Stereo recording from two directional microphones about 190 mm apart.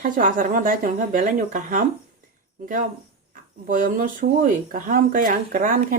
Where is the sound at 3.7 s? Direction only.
45° right (ahead or behind).